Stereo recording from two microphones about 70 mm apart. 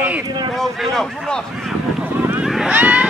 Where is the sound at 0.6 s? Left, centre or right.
Centre.